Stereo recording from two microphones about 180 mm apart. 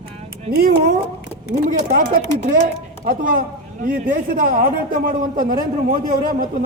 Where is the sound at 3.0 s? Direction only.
55° right (ahead or behind).